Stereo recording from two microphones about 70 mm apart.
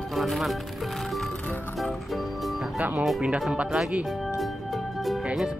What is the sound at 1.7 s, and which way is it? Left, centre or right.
Music, centre.